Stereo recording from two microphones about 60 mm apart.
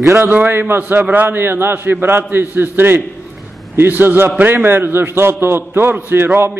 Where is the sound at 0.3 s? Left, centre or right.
Right.